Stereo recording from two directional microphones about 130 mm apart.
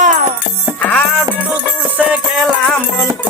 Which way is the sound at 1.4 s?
15° right (ahead or behind).